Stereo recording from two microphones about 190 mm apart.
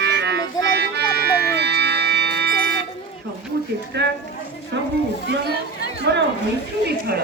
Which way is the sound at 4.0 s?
65° right (ahead or behind).